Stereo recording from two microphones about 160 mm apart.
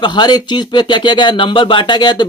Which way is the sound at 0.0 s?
25° left (ahead or behind).